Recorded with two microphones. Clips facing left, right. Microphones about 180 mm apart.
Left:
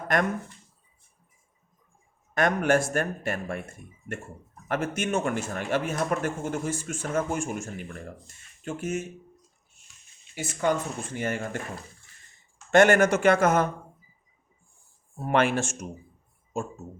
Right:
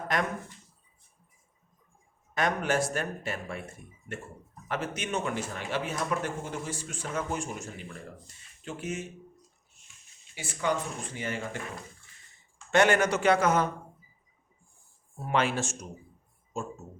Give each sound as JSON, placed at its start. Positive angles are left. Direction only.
{"t": 0.1, "sound": "speech", "side_deg": 50}
{"t": 2.3, "sound": "speech", "side_deg": 50}
{"t": 10.3, "sound": "speech", "side_deg": 50}
{"t": 12.7, "sound": "speech", "side_deg": 45}
{"t": 15.3, "sound": "speech", "side_deg": 55}